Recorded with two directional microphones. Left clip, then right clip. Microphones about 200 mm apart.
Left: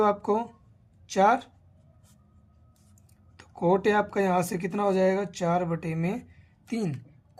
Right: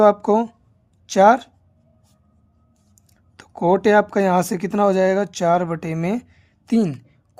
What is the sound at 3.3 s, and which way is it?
Speech, 60° right (ahead or behind).